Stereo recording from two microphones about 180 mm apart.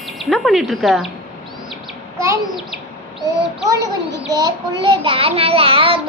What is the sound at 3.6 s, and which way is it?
A child's voice, 20° right (ahead or behind).